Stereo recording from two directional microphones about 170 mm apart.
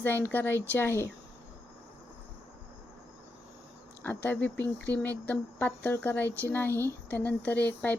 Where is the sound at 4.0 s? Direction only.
10° left (ahead or behind).